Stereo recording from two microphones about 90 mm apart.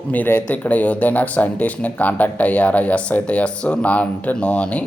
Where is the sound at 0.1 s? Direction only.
20° left (ahead or behind).